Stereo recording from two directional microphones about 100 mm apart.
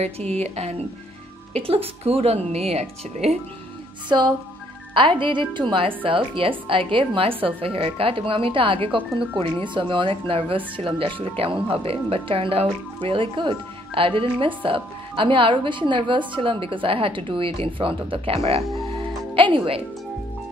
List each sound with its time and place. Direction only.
0.0 s speech: 90° right
1.5 s speech: 75° right (ahead or behind)
4.1 s speech: 45° right (ahead or behind); by 18.6 s 80° right
19.3 s speech: 60° right (ahead or behind)